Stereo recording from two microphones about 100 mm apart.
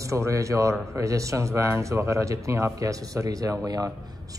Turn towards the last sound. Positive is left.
turn(degrees=-35)  # may be behind; listen again after turning